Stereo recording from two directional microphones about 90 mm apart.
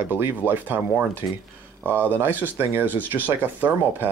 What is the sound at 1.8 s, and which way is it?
Speech, 20° right (ahead or behind).